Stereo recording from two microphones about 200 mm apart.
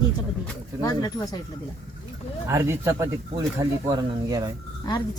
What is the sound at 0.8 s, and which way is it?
Speech, 20° left (ahead or behind).